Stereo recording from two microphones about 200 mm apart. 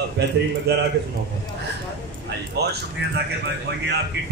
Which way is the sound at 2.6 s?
55° right (ahead or behind).